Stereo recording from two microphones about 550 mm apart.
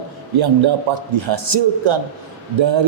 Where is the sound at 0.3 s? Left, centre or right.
Right.